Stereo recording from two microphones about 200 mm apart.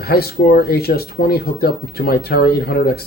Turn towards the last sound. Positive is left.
turn(degrees=50)  # may be behind; listen again after turning